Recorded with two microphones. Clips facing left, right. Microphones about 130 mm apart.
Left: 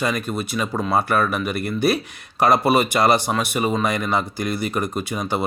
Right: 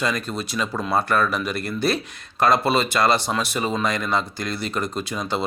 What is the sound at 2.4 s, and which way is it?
Speech, 20° left (ahead or behind).